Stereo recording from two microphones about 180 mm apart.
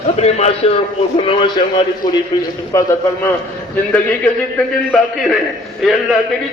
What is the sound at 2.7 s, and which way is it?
Speech, 15° left (ahead or behind).